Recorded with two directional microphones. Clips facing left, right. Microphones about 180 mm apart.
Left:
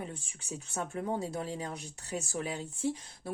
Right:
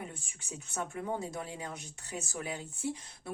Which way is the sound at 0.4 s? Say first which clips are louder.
Left 1 dB; 35° left (ahead or behind).